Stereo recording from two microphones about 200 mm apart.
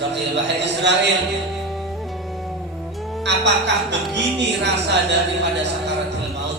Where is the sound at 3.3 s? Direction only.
60° right (ahead or behind).